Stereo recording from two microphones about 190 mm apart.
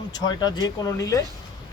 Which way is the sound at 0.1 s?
20° left (ahead or behind).